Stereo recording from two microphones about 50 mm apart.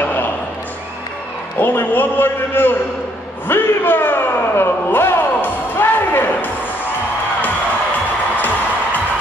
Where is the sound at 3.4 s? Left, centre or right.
Left.